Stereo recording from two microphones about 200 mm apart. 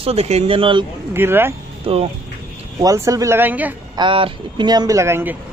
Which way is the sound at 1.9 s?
30° right (ahead or behind).